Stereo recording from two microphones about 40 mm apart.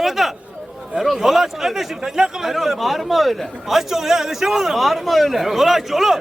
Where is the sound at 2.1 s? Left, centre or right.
Centre.